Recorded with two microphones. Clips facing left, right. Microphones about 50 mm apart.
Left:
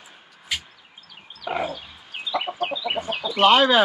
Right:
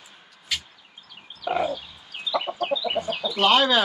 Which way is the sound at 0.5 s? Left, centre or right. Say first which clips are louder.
Left 1 dB; centre.